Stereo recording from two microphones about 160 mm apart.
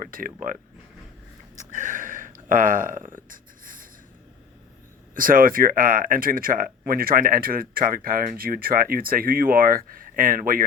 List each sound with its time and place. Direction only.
0.0 s speech: 60° right (ahead or behind)
1.7 s a sound: 55° right (ahead or behind)
5.1 s speech: 60° right (ahead or behind)